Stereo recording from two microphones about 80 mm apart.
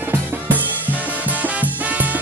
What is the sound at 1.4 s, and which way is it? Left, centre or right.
Music, right.